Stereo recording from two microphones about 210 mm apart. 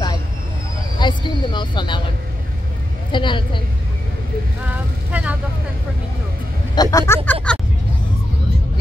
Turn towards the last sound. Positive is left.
turn(degrees=5)  # may be behind; listen again after turning